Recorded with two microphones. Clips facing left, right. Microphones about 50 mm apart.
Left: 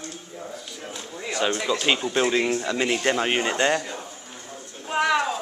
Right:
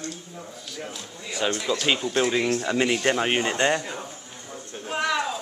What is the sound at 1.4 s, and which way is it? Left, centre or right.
Speech, centre.